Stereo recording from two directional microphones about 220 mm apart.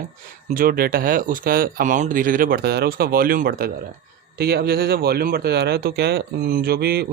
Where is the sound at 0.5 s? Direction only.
40° right (ahead or behind).